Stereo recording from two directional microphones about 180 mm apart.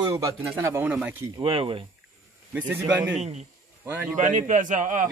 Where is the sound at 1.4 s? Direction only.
30° right (ahead or behind).